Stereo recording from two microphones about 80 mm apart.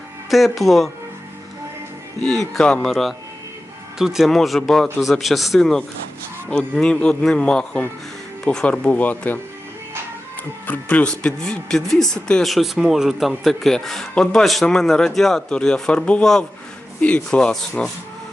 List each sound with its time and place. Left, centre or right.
0.3 s speech: centre
2.5 s speech: centre
10.7 s speech: left
11.0 s speech: centre